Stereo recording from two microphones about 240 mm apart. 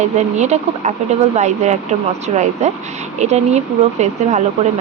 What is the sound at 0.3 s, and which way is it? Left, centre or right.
Speech, right.